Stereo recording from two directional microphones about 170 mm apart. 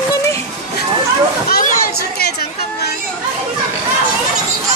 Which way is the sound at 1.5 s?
55° left (ahead or behind).